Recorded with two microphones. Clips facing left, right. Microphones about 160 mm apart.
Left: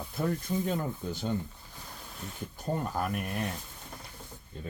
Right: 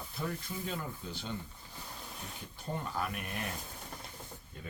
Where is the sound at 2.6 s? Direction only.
45° left (ahead or behind).